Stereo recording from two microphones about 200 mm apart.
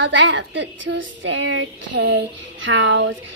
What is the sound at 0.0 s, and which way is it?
A woman's voice, 65° right (ahead or behind).